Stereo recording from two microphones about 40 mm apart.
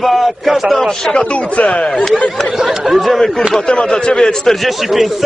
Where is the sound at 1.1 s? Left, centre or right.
Left.